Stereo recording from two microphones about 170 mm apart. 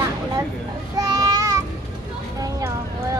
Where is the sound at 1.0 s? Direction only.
20° right (ahead or behind).